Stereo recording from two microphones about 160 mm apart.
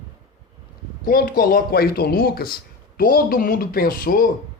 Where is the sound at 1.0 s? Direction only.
65° left (ahead or behind).